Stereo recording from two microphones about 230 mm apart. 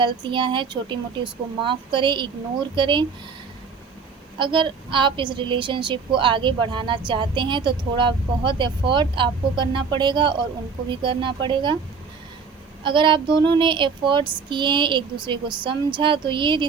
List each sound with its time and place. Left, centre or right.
0.0 s a woman's voice: right
4.4 s a woman's voice: right
12.8 s a woman's voice: right